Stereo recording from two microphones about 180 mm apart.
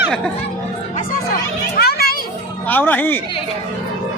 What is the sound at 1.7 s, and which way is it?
Children playing, 60° left (ahead or behind).